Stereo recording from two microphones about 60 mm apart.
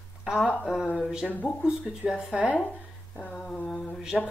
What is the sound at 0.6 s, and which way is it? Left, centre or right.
Speech, centre.